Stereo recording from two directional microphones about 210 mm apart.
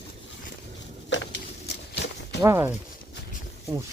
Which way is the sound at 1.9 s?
55° left (ahead or behind).